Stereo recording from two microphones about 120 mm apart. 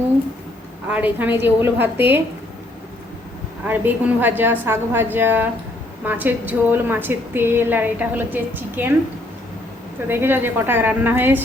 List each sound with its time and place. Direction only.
0.9 s a woman's voice: 15° right (ahead or behind)
3.7 s a woman's voice: 15° right (ahead or behind)
10.1 s a woman's voice: 20° right (ahead or behind)